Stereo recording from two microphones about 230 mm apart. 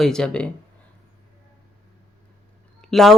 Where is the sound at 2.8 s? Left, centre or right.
Centre.